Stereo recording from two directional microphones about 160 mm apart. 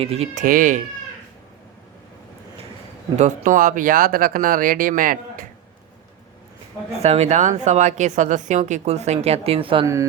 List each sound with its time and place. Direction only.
0.0 s speech: 40° right (ahead or behind)
0.4 s speech: 55° right (ahead or behind)
3.2 s speech: 50° right (ahead or behind)
6.9 s speech: 40° right (ahead or behind)
9.8 s mantra: 20° right (ahead or behind)